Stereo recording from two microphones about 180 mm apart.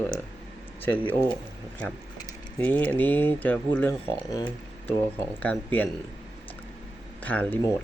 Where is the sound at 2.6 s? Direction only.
10° left (ahead or behind).